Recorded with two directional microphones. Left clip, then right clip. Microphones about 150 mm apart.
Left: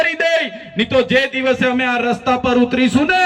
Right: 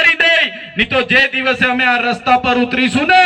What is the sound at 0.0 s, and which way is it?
A man's voice, 25° left (ahead or behind).